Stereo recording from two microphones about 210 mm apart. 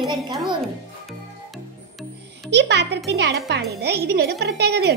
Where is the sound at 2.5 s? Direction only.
55° right (ahead or behind).